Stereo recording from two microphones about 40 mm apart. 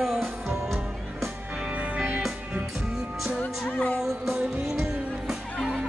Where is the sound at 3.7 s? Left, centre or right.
Left.